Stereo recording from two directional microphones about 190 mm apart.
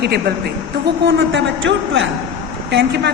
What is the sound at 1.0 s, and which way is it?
A woman's voice, 70° right (ahead or behind).